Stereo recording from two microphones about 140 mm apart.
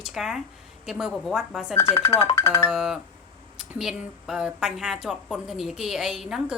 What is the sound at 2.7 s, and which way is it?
A woman's voice, 5° right (ahead or behind).